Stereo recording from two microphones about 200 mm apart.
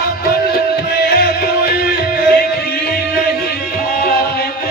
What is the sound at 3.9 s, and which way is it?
Music, 45° left (ahead or behind).